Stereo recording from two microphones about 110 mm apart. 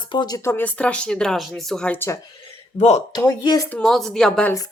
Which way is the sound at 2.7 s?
90° left.